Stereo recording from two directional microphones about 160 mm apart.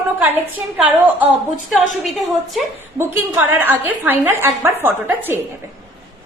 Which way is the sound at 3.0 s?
10° right (ahead or behind).